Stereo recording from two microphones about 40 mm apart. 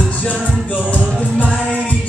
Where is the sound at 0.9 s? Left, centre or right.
Left.